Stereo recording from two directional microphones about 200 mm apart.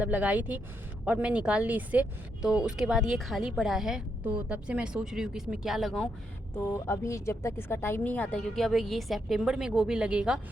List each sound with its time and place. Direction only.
0.0 s speech: 5° right (ahead or behind)
6.7 s speech: 15° left (ahead or behind); by 10.4 s 5° right (ahead or behind)